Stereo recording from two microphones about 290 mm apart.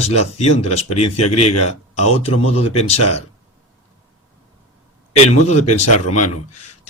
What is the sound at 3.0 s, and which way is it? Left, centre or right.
Speech, left.